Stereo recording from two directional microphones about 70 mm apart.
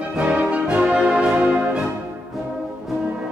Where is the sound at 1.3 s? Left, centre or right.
Centre.